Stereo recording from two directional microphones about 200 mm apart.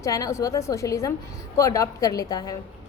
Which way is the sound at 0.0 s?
15° left (ahead or behind).